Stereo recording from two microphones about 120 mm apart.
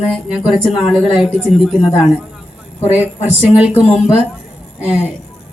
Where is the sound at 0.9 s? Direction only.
5° right (ahead or behind).